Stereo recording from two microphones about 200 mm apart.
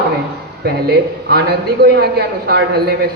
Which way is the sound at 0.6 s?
55° right (ahead or behind).